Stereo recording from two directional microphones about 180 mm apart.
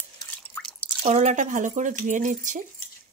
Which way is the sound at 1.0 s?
40° right (ahead or behind).